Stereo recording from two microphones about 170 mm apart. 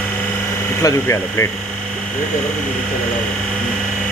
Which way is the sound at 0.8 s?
15° left (ahead or behind).